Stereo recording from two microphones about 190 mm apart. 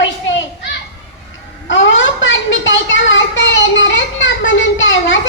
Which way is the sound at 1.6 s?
75° left (ahead or behind).